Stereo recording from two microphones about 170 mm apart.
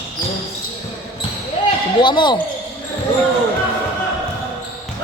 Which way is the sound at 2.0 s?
25° left (ahead or behind).